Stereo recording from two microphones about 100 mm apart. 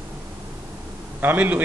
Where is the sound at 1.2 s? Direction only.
15° right (ahead or behind).